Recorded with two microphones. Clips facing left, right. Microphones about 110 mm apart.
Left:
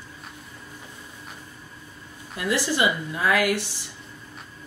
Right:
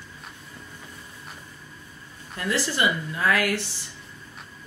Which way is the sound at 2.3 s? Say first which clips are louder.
Left 2 dB; 15° left (ahead or behind).